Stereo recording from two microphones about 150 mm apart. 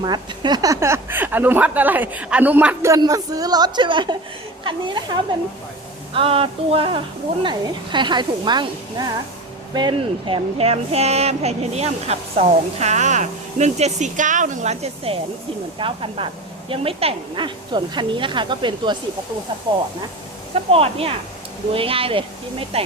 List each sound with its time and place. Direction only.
0.0 s speech: 30° right (ahead or behind)
6.1 s speech: 40° right (ahead or behind)
20.7 s speech: 40° right (ahead or behind)